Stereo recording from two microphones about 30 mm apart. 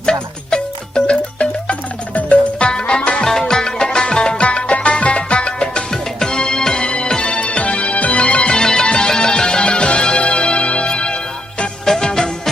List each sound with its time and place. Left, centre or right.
0.0 s music: left
1.0 s music: left
2.7 s music: left
3.2 s music: centre
4.4 s music: left
5.9 s music: left
7.2 s music: left
8.2 s music: left
8.6 s music: left
11.9 s music: centre